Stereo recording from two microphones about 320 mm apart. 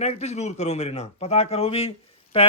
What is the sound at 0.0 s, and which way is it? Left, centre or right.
A man's voice, left.